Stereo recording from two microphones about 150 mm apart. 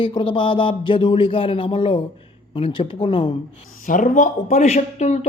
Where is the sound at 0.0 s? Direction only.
35° left (ahead or behind).